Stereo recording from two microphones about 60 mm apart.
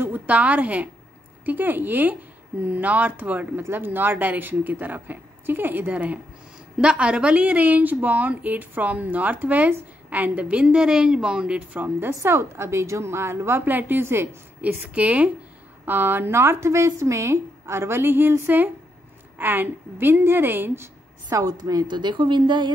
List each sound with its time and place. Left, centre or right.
0.1 s a woman's voice: right
6.8 s speech: centre
12.1 s speech: right
13.7 s a woman's voice: right
14.6 s speech: right
15.8 s speech: right
19.3 s a woman's voice: right
21.3 s a woman's voice: right